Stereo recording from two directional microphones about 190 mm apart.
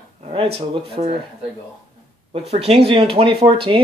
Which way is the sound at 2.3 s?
30° right (ahead or behind).